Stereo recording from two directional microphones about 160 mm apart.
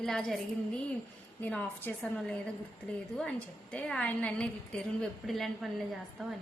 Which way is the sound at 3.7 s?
10° left (ahead or behind).